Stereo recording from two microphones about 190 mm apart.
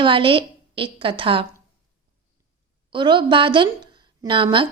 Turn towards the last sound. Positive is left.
turn(degrees=-25)  # may be behind; listen again after turning